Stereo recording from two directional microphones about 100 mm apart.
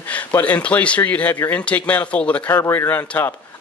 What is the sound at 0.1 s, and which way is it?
A man's voice, 15° left (ahead or behind).